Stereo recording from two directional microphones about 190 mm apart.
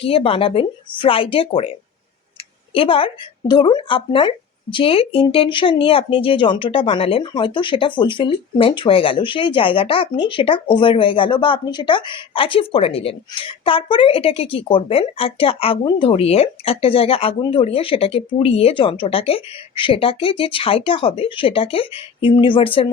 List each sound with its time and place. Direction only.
0.0 s speech: 30° left (ahead or behind)
2.7 s speech: 30° left (ahead or behind)